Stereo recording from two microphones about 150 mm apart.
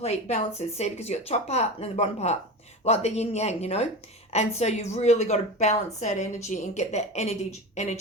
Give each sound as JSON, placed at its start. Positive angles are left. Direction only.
{"t": 0.0, "sound": "a woman's voice", "side_deg": 45}